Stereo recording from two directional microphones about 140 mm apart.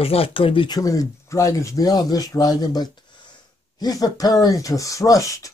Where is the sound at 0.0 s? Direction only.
45° left (ahead or behind).